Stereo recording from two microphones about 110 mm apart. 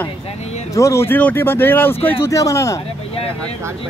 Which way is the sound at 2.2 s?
30° left (ahead or behind).